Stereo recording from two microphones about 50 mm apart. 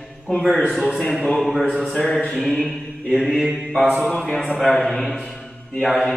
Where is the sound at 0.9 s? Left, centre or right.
Centre.